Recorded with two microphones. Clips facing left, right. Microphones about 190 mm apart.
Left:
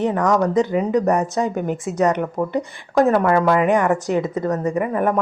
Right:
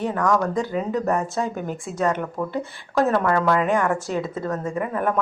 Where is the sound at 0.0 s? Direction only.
20° left (ahead or behind).